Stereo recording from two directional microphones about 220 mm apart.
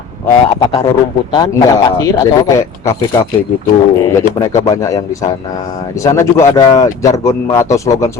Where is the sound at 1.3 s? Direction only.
15° left (ahead or behind).